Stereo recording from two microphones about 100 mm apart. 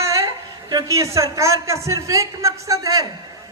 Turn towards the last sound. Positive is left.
turn(degrees=-35)  # may be behind; listen again after turning